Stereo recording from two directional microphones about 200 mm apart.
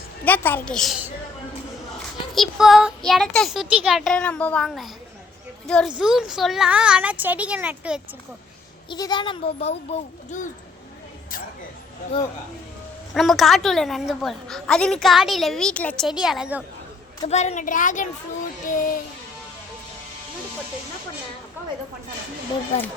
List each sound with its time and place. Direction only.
0.3 s a woman's voice: 10° left (ahead or behind)
2.3 s a woman's voice: centre (ahead or behind)
8.9 s a child's voice: 20° left (ahead or behind)
13.1 s a woman's voice: centre (ahead or behind)
17.2 s a woman's voice: 35° left (ahead or behind)
18.7 s music: 45° left (ahead or behind)